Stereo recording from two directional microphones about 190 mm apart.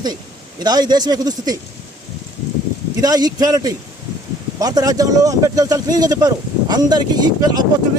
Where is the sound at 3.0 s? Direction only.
20° right (ahead or behind).